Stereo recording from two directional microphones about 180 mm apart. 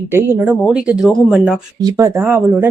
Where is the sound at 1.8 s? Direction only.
20° right (ahead or behind).